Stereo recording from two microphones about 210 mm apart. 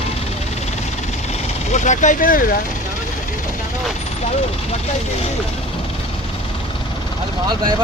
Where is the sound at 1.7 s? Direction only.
35° left (ahead or behind).